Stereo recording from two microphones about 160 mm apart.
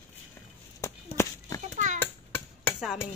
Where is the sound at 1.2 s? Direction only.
15° left (ahead or behind).